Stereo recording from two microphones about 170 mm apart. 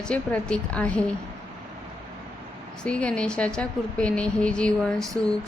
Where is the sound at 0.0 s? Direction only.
5° left (ahead or behind).